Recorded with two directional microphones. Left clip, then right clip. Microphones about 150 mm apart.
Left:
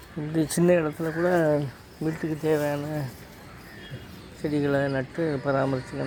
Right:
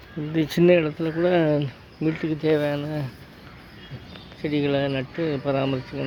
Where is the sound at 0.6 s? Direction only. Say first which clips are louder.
Right 4 dB; 30° right (ahead or behind).